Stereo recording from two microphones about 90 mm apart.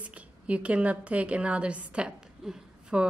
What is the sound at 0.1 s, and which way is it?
A woman's voice, 15° right (ahead or behind).